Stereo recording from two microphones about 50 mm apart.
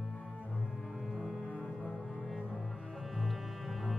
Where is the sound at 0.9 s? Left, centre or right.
Centre.